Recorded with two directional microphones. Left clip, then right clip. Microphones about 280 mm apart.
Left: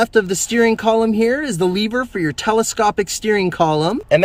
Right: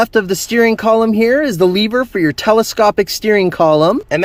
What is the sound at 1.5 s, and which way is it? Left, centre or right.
Speech, right.